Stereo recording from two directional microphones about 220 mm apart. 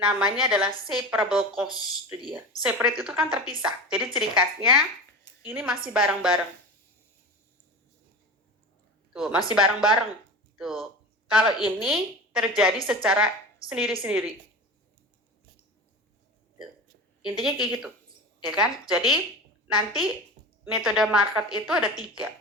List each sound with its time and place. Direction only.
0.0 s a woman's voice: 5° right (ahead or behind)
9.1 s a woman's voice: centre (ahead or behind)
17.4 s a woman's voice: centre (ahead or behind)
20.4 s a sound: 30° right (ahead or behind)
20.7 s a woman's voice: 5° right (ahead or behind)